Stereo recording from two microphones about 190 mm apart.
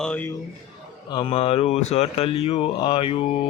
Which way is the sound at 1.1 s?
25° left (ahead or behind).